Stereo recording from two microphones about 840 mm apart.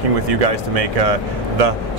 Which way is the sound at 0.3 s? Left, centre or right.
Right.